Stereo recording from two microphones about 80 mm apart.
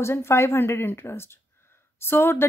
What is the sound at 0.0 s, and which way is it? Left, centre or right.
Speech, left.